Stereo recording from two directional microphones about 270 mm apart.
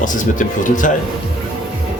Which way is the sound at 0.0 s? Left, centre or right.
Left.